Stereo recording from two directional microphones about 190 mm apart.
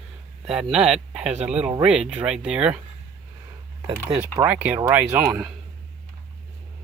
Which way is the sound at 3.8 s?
20° right (ahead or behind).